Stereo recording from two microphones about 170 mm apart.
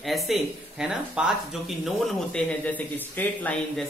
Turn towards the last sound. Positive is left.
turn(degrees=10)  # may be behind; listen again after turning